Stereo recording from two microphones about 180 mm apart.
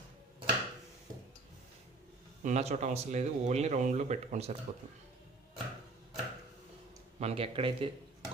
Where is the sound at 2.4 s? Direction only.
40° right (ahead or behind).